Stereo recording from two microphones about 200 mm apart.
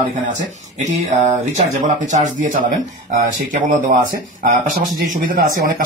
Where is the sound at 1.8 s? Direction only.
40° right (ahead or behind).